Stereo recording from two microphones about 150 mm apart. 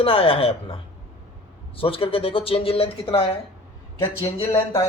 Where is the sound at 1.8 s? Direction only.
35° left (ahead or behind).